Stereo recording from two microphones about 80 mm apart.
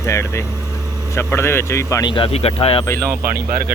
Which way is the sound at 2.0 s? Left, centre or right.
Left.